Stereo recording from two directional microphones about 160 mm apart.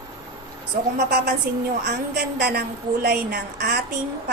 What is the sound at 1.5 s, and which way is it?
Speech, 75° right (ahead or behind).